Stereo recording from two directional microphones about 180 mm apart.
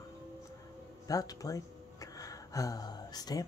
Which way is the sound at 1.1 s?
20° left (ahead or behind).